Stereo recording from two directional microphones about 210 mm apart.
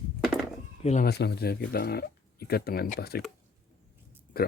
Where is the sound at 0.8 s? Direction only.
30° left (ahead or behind).